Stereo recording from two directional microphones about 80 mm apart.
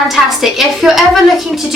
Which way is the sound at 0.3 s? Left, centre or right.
Centre.